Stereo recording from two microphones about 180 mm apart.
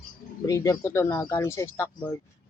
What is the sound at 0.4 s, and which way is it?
Speech, 20° left (ahead or behind).